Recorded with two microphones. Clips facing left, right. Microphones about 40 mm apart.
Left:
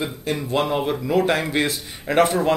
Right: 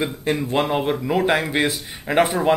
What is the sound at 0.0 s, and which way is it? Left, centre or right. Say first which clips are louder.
Speech: right 3 dB; right.